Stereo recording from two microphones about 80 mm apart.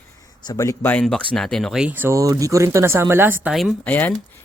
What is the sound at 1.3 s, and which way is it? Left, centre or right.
Speech, centre.